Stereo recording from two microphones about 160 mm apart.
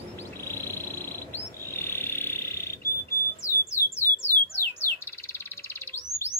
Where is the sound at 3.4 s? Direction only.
20° left (ahead or behind).